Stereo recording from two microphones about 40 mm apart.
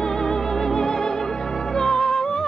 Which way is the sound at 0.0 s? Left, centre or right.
Centre.